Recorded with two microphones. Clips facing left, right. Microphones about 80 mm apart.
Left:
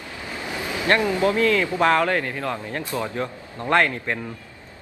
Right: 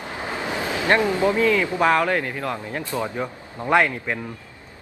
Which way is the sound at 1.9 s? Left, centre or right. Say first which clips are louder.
Even; centre.